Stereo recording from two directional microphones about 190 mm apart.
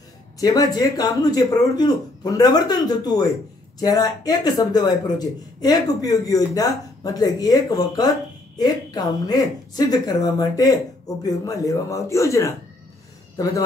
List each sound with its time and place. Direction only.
0.4 s a man's voice: 20° left (ahead or behind)